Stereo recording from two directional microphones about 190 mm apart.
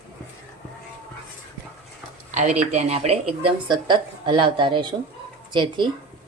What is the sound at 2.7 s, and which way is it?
Speech, 35° right (ahead or behind).